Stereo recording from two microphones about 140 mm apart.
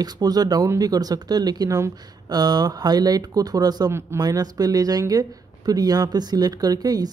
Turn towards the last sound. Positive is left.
turn(degrees=-25)  # may be behind; listen again after turning